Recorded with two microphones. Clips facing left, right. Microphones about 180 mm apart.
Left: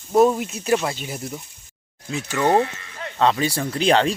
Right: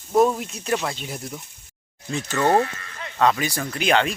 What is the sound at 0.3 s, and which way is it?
Speech, 5° left (ahead or behind).